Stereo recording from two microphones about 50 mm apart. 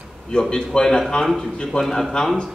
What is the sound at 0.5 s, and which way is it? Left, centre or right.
A man's voice, centre.